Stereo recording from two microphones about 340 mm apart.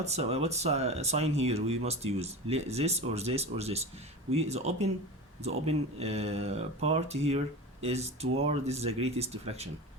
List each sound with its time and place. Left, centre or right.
0.0 s speech: centre